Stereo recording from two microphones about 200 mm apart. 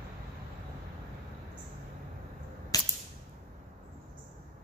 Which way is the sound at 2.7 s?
20° left (ahead or behind).